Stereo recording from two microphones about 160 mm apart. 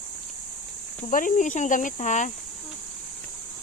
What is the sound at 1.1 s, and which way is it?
Speech, 55° left (ahead or behind).